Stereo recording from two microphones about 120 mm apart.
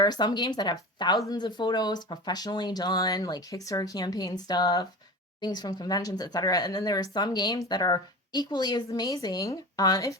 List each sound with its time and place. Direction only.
0.0 s speech: 35° left (ahead or behind)